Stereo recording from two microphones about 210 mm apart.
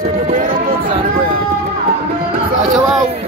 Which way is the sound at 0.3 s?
40° right (ahead or behind).